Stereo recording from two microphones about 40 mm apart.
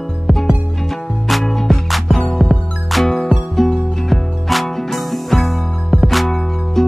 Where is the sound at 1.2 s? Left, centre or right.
Centre.